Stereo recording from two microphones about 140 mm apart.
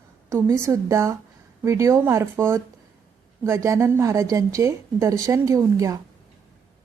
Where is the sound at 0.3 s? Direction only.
20° right (ahead or behind).